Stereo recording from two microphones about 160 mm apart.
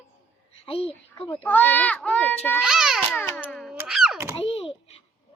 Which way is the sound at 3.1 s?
10° left (ahead or behind).